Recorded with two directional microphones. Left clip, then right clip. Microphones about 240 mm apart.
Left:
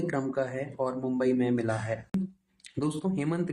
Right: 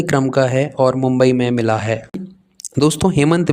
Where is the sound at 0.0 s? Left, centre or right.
Right.